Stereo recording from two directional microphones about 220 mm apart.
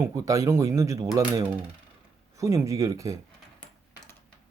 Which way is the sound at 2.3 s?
15° right (ahead or behind).